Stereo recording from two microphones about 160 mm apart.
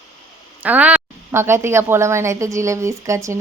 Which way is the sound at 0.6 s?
10° right (ahead or behind).